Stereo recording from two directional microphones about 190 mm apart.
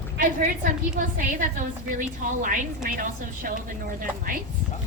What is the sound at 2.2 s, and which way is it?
A woman's voice, 45° right (ahead or behind).